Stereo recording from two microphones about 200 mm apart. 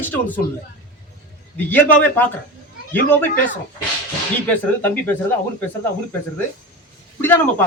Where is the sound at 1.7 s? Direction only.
10° left (ahead or behind).